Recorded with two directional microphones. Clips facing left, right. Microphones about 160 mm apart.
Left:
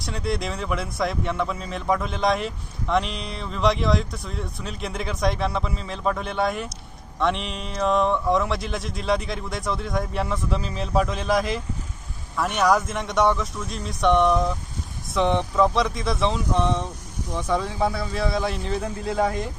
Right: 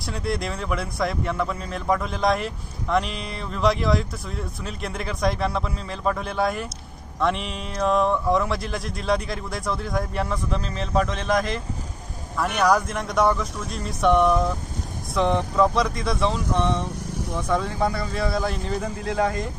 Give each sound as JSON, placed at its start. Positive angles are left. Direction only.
{"t": 0.0, "sound": "speech", "side_deg": 0}